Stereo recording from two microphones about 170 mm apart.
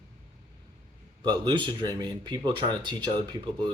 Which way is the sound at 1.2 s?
25° right (ahead or behind).